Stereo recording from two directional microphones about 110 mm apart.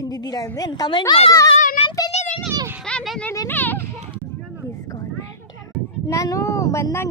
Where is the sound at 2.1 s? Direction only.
85° left.